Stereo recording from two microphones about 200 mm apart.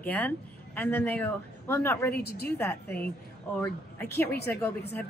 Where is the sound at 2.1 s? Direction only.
50° left (ahead or behind).